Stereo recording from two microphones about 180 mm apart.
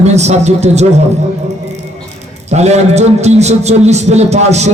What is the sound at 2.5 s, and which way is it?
A man's voice, 40° right (ahead or behind).